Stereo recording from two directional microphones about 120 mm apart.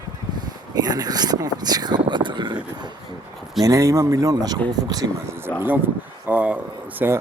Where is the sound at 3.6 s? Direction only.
25° right (ahead or behind).